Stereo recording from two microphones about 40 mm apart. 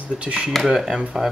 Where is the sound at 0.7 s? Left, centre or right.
Centre.